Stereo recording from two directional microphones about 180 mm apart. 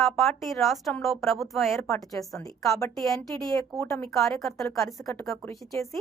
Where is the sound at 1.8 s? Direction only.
20° left (ahead or behind).